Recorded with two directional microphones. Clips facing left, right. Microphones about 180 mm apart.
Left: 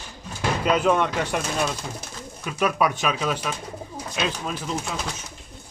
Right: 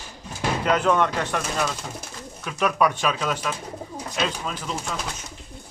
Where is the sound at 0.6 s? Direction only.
10° left (ahead or behind).